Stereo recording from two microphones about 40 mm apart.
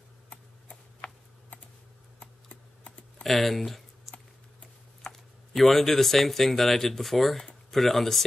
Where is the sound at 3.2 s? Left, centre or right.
Centre.